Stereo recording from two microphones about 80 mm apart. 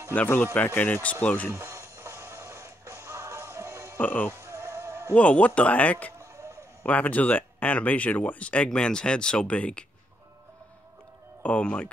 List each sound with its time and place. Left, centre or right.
0.1 s speech: left
1.5 s music: right
4.0 s speech: left
4.3 s sheep: right
5.1 s speech: centre
6.1 s a sound: right
6.8 s speech: centre
11.4 s speech: centre